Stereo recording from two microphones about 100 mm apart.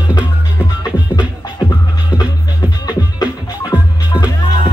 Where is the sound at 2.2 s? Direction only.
45° left (ahead or behind).